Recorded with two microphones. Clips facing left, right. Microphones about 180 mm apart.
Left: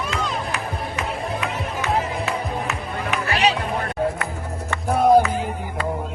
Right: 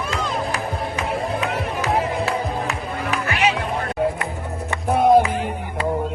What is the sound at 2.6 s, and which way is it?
Music, 35° right (ahead or behind).